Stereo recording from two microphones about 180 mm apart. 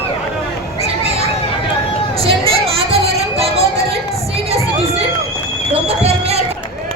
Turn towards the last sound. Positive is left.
turn(degrees=-35)  # may be behind; listen again after turning